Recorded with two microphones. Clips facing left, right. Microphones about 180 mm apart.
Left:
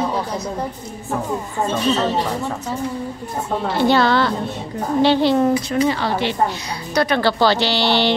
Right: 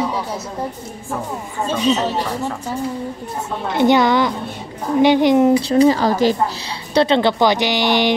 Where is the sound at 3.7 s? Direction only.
20° right (ahead or behind).